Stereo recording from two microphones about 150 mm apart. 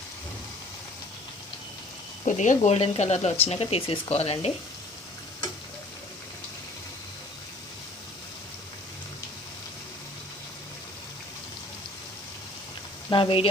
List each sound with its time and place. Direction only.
2.2 s speech: 55° left (ahead or behind)
2.6 s speech: 45° left (ahead or behind)
13.1 s speech: 35° left (ahead or behind)